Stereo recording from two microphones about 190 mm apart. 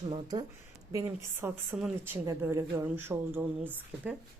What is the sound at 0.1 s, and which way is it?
Speech, 20° right (ahead or behind).